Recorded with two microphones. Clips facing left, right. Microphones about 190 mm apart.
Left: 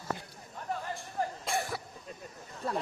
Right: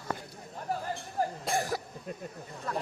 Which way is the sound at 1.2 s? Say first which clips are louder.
Right 3 dB; 40° right (ahead or behind).